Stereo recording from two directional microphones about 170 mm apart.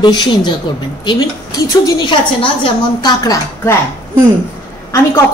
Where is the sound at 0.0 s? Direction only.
25° left (ahead or behind).